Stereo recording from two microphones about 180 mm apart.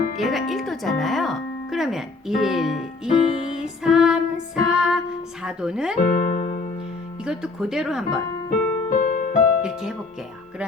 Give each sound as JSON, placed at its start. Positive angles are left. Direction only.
{"t": 0.2, "sound": "music", "side_deg": 0}
{"t": 6.0, "sound": "music", "side_deg": 40}
{"t": 7.3, "sound": "speech", "side_deg": -5}
{"t": 8.4, "sound": "music", "side_deg": 45}
{"t": 9.6, "sound": "music", "side_deg": -5}